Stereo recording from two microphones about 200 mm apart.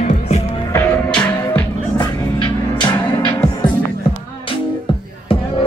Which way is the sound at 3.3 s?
25° left (ahead or behind).